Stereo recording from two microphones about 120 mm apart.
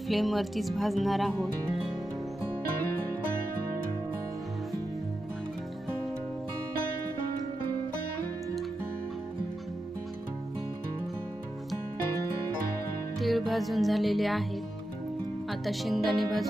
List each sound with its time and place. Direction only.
0.1 s speech: centre (ahead or behind)
13.1 s music: centre (ahead or behind)
15.4 s speech: centre (ahead or behind)